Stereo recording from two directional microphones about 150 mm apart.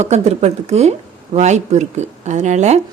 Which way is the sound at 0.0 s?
50° right (ahead or behind).